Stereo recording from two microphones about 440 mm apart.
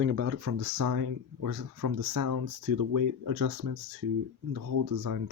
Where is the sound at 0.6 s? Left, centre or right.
Right.